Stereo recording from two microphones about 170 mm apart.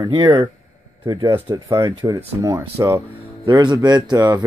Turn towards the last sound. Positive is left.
turn(degrees=-20)  # may be behind; listen again after turning